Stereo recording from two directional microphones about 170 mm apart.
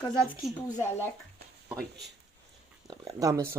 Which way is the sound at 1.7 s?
Centre (ahead or behind).